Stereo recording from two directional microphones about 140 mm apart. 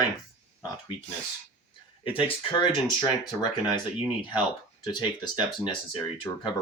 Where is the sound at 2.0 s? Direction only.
40° left (ahead or behind).